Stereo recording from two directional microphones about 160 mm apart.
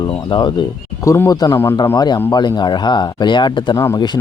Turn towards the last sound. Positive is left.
turn(degrees=25)  # may be behind; listen again after turning